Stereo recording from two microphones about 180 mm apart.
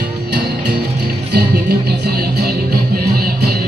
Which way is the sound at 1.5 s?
65° right (ahead or behind).